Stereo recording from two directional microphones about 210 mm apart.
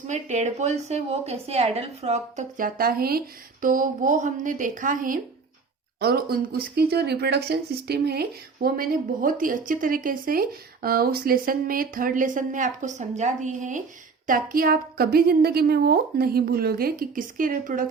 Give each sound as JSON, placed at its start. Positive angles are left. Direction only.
{"t": 0.1, "sound": "a woman's voice", "side_deg": -35}